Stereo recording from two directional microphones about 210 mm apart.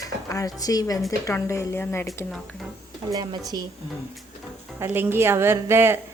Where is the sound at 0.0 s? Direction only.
15° left (ahead or behind).